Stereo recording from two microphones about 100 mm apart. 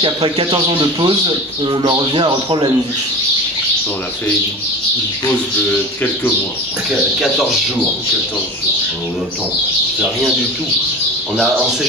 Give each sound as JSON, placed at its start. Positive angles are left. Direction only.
{"t": 0.0, "sound": "speech", "side_deg": -50}
{"t": 6.9, "sound": "speech", "side_deg": 0}